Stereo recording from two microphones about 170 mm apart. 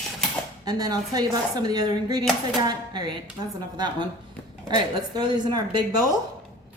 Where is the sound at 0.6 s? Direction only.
25° right (ahead or behind).